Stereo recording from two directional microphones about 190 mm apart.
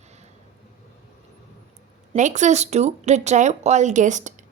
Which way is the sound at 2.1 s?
40° right (ahead or behind).